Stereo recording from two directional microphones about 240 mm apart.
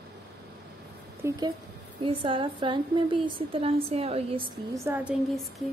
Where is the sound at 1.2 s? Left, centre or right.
Centre.